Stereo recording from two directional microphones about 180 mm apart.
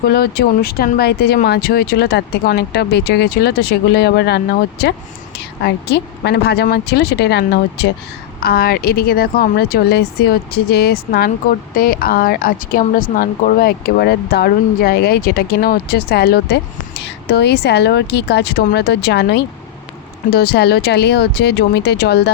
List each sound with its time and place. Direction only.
0.1 s speech: 60° left (ahead or behind)